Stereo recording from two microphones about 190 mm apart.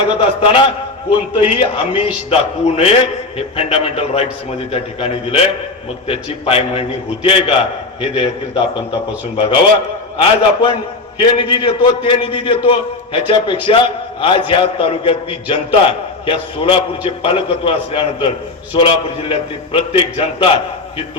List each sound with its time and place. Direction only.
0.1 s a man's voice: 25° left (ahead or behind)
1.9 s a man's voice: 5° right (ahead or behind)
2.3 s a man's voice: 30° left (ahead or behind)